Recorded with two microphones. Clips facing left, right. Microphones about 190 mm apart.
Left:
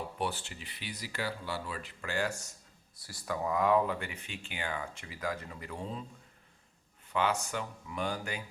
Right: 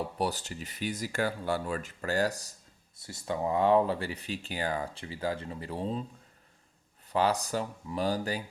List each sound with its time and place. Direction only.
0.2 s speech: 40° right (ahead or behind)
3.0 s speech: 25° right (ahead or behind)
7.1 s speech: 35° right (ahead or behind)